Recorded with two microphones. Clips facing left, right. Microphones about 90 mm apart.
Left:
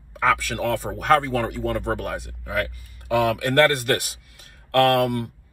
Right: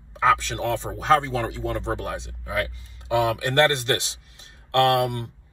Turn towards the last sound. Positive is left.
turn(degrees=-20)  # may be behind; listen again after turning